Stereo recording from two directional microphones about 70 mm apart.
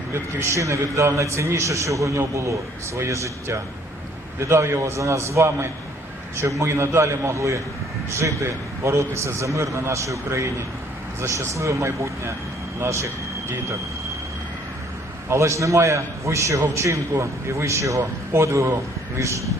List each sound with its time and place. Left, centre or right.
0.1 s a man's voice: right
15.3 s a man's voice: right